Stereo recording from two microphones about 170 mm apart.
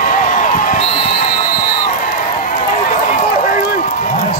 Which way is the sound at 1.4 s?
55° left (ahead or behind).